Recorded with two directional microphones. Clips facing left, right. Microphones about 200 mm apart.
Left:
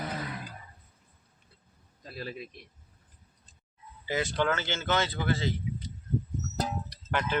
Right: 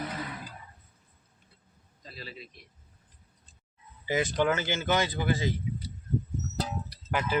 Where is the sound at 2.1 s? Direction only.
50° left (ahead or behind).